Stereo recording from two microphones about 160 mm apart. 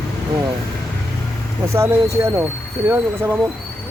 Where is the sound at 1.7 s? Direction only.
20° right (ahead or behind).